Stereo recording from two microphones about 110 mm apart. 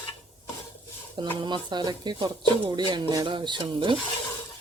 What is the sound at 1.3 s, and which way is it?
Speech, 45° right (ahead or behind).